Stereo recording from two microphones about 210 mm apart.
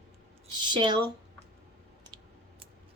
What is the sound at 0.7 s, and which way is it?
Speech, 20° right (ahead or behind).